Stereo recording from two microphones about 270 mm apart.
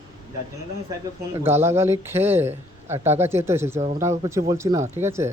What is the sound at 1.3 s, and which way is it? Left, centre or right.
A man's voice, centre.